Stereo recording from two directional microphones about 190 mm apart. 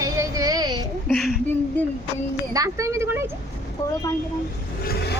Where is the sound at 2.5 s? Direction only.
15° right (ahead or behind).